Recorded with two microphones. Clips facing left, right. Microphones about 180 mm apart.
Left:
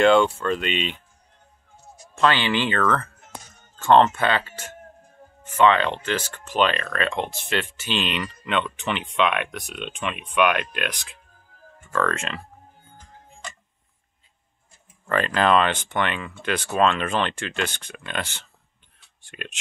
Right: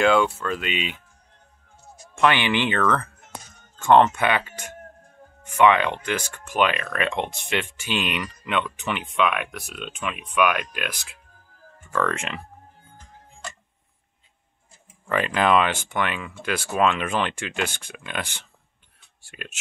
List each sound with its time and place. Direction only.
0.0 s speech: centre (ahead or behind)
2.1 s speech: 15° right (ahead or behind)
11.9 s speech: 15° right (ahead or behind)
15.0 s speech: 15° right (ahead or behind)